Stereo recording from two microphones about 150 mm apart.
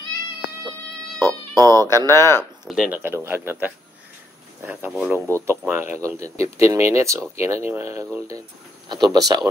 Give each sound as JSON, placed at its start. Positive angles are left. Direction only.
{"t": 1.2, "sound": "speech", "side_deg": -25}
{"t": 2.0, "sound": "speech", "side_deg": 15}
{"t": 2.6, "sound": "speech", "side_deg": -5}
{"t": 3.0, "sound": "speech", "side_deg": -15}
{"t": 8.8, "sound": "speech", "side_deg": -30}